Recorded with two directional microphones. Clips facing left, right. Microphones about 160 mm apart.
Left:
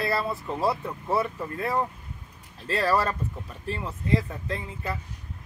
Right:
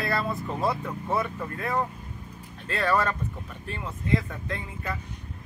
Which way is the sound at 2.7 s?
35° left (ahead or behind).